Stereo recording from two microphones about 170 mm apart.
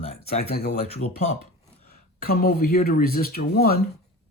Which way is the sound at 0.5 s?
65° left (ahead or behind).